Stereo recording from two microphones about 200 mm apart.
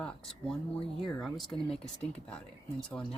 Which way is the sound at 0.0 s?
5° left (ahead or behind).